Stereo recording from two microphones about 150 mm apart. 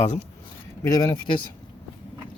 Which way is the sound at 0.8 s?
25° left (ahead or behind).